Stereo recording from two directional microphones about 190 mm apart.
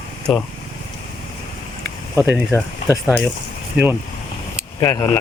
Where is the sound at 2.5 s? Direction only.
10° left (ahead or behind).